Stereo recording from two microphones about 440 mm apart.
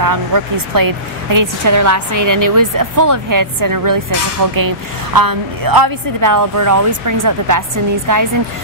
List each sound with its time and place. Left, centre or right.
0.0 s a woman's voice: right